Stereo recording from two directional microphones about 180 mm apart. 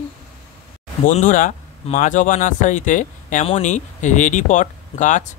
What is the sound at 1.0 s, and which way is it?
Speech, 45° left (ahead or behind).